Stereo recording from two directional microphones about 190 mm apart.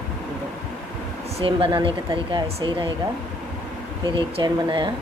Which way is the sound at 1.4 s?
30° right (ahead or behind).